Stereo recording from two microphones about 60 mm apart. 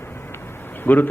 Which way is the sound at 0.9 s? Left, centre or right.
Left.